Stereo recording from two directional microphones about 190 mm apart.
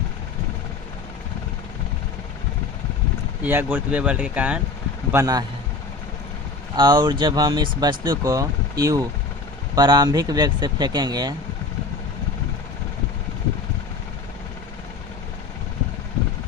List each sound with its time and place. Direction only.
3.4 s speech: 10° right (ahead or behind)
5.1 s speech: 20° right (ahead or behind)
6.7 s speech: 25° right (ahead or behind)